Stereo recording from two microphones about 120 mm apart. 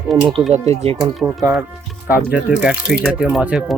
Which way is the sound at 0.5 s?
65° right (ahead or behind).